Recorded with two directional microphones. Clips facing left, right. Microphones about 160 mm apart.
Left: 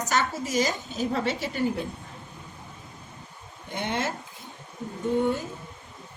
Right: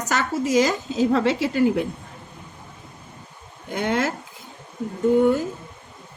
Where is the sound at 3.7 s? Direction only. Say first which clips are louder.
Right 6 dB; 90° right.